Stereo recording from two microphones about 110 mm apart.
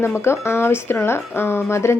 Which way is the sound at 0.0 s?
25° left (ahead or behind).